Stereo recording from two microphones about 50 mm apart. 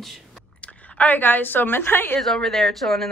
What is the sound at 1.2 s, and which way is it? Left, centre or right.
A woman's voice, left.